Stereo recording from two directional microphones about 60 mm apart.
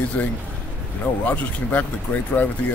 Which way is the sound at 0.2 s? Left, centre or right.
Left.